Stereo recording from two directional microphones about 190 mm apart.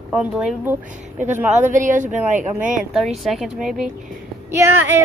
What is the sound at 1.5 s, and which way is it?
Speech, 40° right (ahead or behind).